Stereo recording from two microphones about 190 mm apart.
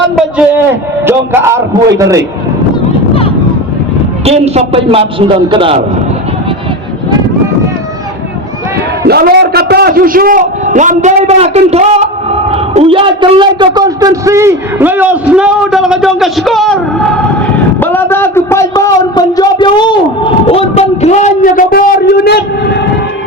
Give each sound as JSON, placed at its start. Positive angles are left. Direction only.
{"t": 1.0, "sound": "a man's voice", "side_deg": -15}
{"t": 4.3, "sound": "a man's voice", "side_deg": -35}
{"t": 9.0, "sound": "a man's voice", "side_deg": -55}